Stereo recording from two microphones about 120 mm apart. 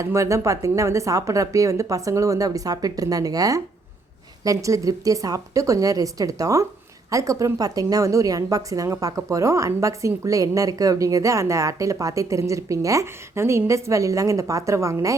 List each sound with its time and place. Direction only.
0.0 s a woman's voice: 25° right (ahead or behind)